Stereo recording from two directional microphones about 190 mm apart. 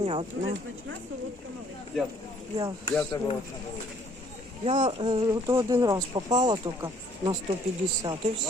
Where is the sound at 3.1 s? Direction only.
20° left (ahead or behind).